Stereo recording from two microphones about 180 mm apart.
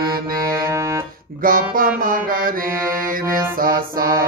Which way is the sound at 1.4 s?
55° right (ahead or behind).